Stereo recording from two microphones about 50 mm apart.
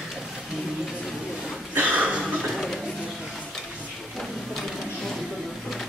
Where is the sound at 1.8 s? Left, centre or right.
Right.